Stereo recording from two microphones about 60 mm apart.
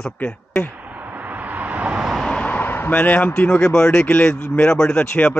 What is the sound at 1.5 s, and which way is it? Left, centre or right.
Vehicle, right.